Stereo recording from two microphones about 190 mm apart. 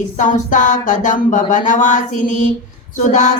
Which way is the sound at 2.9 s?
40° left (ahead or behind).